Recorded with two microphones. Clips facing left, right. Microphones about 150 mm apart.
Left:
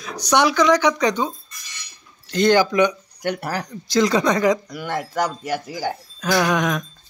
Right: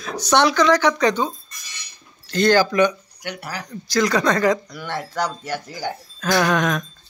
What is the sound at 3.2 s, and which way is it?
Speech, 45° left (ahead or behind).